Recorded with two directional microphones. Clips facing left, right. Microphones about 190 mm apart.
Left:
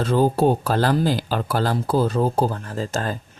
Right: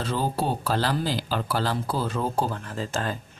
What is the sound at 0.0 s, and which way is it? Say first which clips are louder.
Speech: left 9 dB; 50° left (ahead or behind).